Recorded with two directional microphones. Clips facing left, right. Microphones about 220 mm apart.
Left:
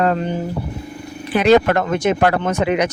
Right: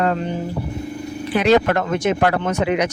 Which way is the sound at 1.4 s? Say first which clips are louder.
Left 3 dB; 50° left (ahead or behind).